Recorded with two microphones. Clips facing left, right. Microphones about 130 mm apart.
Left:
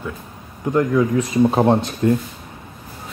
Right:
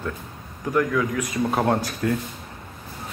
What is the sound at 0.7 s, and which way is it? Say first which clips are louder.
Speech: left 5 dB; 25° left (ahead or behind).